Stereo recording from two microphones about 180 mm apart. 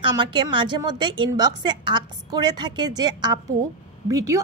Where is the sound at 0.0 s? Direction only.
25° right (ahead or behind).